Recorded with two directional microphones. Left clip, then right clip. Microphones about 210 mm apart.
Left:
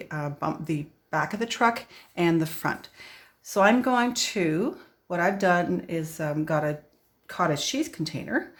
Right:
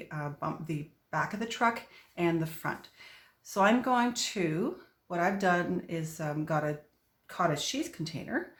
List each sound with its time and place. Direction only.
0.0 s speech: 40° left (ahead or behind)